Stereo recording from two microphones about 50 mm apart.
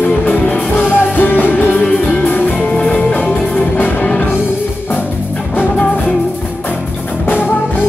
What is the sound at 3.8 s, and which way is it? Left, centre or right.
Music, left.